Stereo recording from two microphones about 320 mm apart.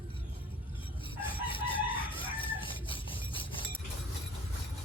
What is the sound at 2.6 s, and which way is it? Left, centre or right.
Rub, centre.